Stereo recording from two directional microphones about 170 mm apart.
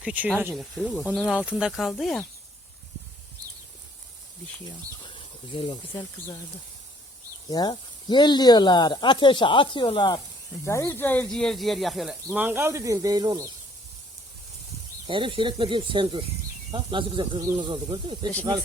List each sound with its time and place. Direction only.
0.0 s speech: 5° right (ahead or behind)
5.0 s a sound: 30° left (ahead or behind)
7.4 s speech: 20° left (ahead or behind)
10.6 s speech: 15° left (ahead or behind); by 13.5 s 20° right (ahead or behind)
15.0 s speech: 30° right (ahead or behind)